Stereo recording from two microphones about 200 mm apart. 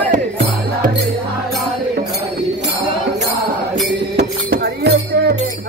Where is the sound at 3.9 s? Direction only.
55° right (ahead or behind).